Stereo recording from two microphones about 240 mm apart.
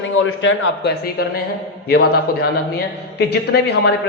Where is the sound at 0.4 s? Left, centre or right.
Left.